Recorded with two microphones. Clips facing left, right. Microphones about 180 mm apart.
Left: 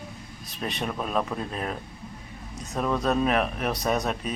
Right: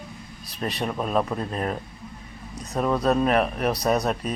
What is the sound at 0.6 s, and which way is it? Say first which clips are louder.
Speech: right 3 dB; centre (ahead or behind).